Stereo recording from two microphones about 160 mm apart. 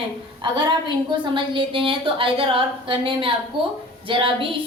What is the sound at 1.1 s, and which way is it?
A woman's voice, 30° right (ahead or behind).